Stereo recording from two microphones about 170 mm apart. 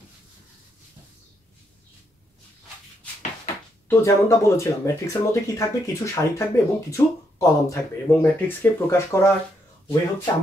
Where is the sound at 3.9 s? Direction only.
15° left (ahead or behind).